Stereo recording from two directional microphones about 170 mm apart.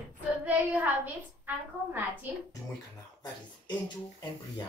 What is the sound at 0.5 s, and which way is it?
A woman's voice, 10° right (ahead or behind).